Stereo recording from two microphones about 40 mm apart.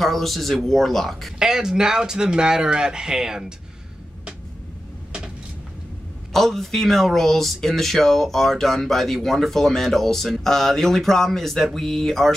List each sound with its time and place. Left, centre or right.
0.0 s speech: centre
1.4 s speech: centre
6.3 s speech: centre